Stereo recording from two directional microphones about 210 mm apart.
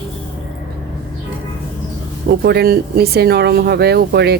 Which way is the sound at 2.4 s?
50° right (ahead or behind).